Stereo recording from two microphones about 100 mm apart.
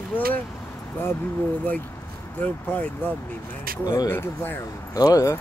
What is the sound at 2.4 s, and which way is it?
Speech, 15° left (ahead or behind).